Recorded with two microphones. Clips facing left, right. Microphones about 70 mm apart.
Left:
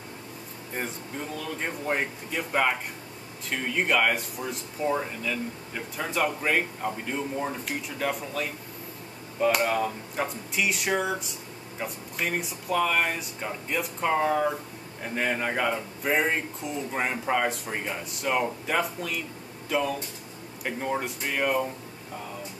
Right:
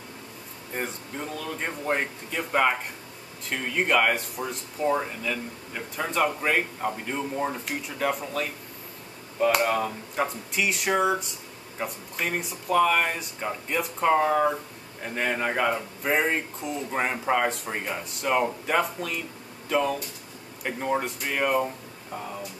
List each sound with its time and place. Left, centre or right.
0.7 s speech: centre